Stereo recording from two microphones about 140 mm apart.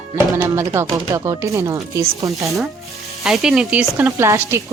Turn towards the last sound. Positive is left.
turn(degrees=-20)  # may be behind; listen again after turning